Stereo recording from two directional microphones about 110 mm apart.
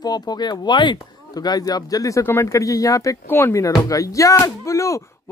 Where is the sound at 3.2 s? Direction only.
20° left (ahead or behind).